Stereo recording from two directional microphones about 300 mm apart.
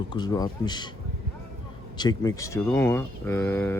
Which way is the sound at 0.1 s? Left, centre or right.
Centre.